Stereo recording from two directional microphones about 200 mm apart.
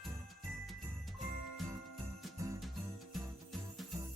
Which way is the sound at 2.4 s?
15° right (ahead or behind).